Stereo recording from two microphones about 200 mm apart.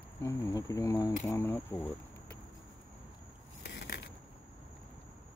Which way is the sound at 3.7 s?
60° left (ahead or behind).